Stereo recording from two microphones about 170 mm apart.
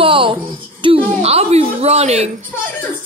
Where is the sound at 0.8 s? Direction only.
35° right (ahead or behind).